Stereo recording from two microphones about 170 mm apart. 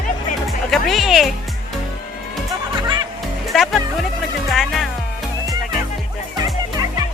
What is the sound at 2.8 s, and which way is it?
Music, 25° right (ahead or behind).